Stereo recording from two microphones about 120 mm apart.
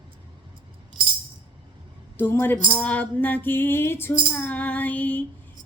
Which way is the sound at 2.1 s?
20° left (ahead or behind).